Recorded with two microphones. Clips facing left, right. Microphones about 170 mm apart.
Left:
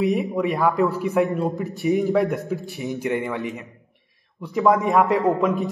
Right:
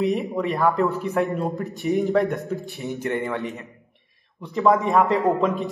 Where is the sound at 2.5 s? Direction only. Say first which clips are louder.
Left 2 dB; 15° left (ahead or behind).